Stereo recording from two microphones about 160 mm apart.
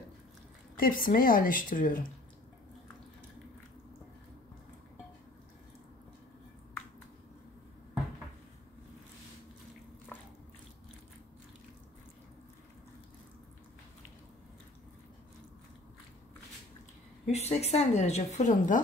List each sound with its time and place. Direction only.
0.7 s a woman's voice: 65° left (ahead or behind)
17.3 s a woman's voice: 40° left (ahead or behind)